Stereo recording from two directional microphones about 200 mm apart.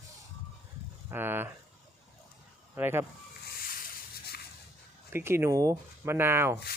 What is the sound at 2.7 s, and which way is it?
Speech, 10° right (ahead or behind).